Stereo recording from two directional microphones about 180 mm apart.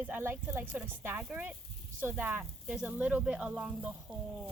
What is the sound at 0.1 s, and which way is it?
Speech, 10° right (ahead or behind).